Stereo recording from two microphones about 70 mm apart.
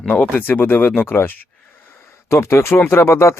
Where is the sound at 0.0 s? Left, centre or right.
Left.